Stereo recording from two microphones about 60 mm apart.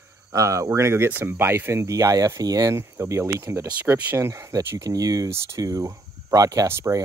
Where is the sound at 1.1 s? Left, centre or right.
Right.